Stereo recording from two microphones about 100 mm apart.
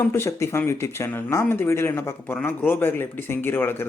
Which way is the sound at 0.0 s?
25° left (ahead or behind).